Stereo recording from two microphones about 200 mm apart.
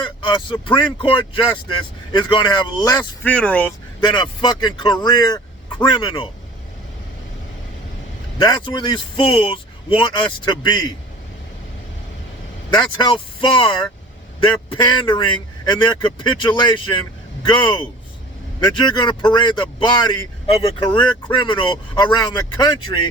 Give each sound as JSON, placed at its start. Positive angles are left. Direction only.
{"t": 0.0, "sound": "speech", "side_deg": 25}
{"t": 3.2, "sound": "speech", "side_deg": 5}
{"t": 4.0, "sound": "speech", "side_deg": 25}
{"t": 8.4, "sound": "speech", "side_deg": 20}
{"t": 12.7, "sound": "speech", "side_deg": 20}